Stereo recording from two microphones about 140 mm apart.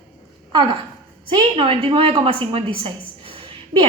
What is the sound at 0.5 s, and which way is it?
A woman's voice, 35° right (ahead or behind).